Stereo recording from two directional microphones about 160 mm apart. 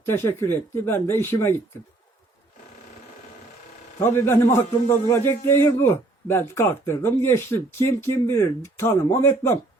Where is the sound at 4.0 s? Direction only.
15° left (ahead or behind).